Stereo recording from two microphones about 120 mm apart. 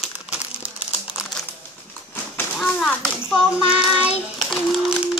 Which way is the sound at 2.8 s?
10° left (ahead or behind).